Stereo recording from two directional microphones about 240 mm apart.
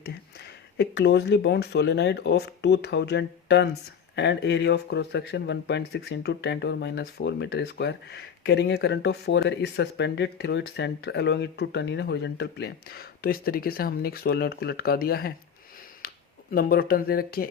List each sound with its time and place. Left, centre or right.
0.8 s speech: left